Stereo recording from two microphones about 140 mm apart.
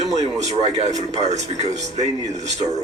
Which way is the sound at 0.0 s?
55° right (ahead or behind).